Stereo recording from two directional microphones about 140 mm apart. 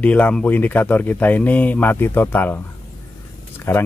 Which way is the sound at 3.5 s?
15° left (ahead or behind).